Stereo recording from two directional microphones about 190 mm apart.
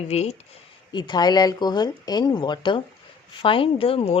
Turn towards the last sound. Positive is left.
turn(degrees=30)  # may be behind; listen again after turning